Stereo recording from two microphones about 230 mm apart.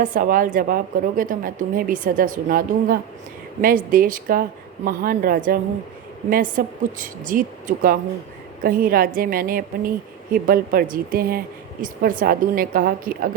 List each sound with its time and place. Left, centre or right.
0.0 s a woman's voice: right